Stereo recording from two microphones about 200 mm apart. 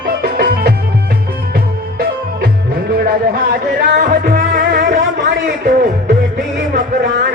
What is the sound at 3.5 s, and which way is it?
Music, 45° right (ahead or behind).